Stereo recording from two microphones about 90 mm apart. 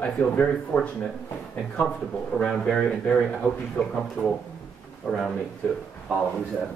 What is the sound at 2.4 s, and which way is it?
A man's voice, 5° left (ahead or behind).